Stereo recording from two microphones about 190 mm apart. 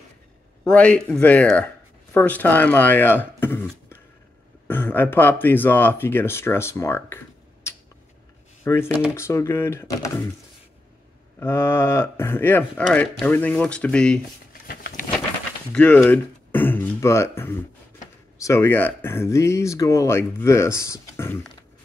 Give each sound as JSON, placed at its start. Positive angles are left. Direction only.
{"t": 0.7, "sound": "speech", "side_deg": 5}
{"t": 4.6, "sound": "speech", "side_deg": 10}
{"t": 11.3, "sound": "speech", "side_deg": 10}
{"t": 14.5, "sound": "a sound", "side_deg": 50}
{"t": 15.7, "sound": "speech", "side_deg": 10}